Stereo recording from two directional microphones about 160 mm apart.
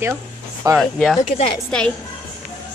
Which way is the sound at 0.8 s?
Centre (ahead or behind).